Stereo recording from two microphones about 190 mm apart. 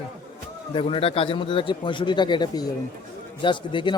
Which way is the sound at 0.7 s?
30° left (ahead or behind).